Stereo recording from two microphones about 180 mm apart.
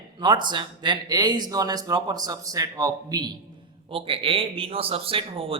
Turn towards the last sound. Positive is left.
turn(degrees=-30)  # may be behind; listen again after turning